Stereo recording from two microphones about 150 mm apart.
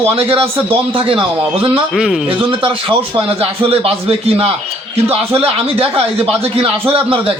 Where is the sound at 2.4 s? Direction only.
35° right (ahead or behind).